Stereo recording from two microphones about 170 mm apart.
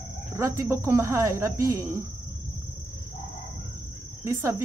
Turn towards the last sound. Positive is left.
turn(degrees=-15)  # may be behind; listen again after turning